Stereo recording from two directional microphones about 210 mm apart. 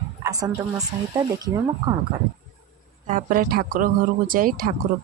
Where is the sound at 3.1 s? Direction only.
40° right (ahead or behind).